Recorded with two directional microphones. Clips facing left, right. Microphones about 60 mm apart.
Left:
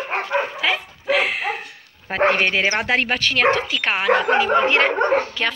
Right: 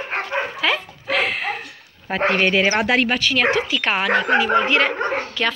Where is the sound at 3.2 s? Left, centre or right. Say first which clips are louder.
Left 1 dB; left.